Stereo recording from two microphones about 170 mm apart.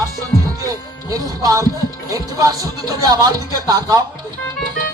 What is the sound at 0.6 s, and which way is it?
Music, 20° right (ahead or behind).